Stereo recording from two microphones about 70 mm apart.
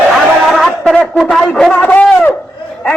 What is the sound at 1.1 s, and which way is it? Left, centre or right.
Speech, centre.